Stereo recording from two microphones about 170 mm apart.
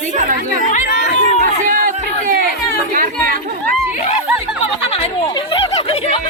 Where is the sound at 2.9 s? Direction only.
55° right (ahead or behind).